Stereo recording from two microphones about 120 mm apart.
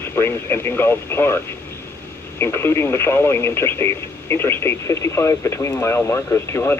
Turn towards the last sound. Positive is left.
turn(degrees=20)  # may be behind; listen again after turning